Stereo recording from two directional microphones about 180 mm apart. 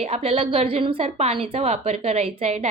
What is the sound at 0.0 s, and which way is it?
Speech, 35° right (ahead or behind).